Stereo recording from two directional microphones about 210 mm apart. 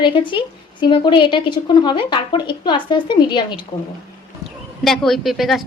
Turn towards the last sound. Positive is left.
turn(degrees=0)  # may be behind; listen again after turning